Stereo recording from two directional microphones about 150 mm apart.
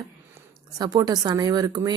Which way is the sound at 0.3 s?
25° right (ahead or behind).